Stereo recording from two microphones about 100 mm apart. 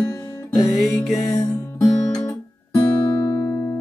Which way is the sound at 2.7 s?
50° left (ahead or behind).